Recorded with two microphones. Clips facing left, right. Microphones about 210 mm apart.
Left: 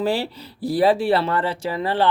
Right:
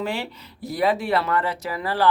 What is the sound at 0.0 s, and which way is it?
Speech, 35° left (ahead or behind).